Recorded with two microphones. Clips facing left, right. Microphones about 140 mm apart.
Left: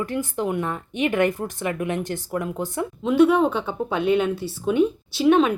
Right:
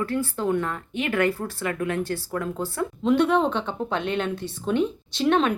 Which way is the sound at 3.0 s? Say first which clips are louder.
Left 3 dB; 5° left (ahead or behind).